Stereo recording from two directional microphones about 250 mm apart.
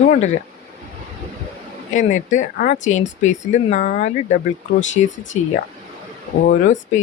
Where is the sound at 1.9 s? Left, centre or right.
Left.